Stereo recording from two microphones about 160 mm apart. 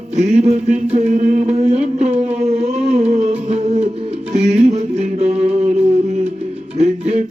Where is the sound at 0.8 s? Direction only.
45° right (ahead or behind).